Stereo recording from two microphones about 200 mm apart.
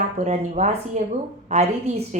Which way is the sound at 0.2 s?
35° right (ahead or behind).